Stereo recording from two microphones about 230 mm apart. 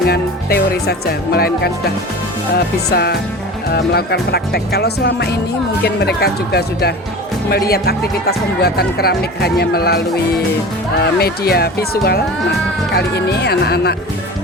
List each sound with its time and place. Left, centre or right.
0.1 s music: left
2.6 s speech: left